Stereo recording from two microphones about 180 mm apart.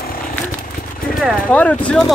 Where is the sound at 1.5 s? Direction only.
5° left (ahead or behind).